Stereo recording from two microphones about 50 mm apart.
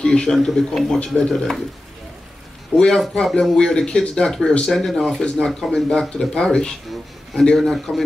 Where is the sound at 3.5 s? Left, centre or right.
Centre.